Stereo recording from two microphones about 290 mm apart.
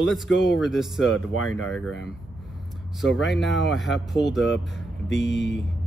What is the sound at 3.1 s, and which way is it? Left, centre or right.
Speech, centre.